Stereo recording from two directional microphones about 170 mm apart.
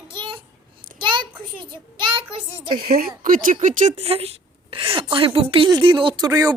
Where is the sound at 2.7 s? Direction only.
60° right (ahead or behind).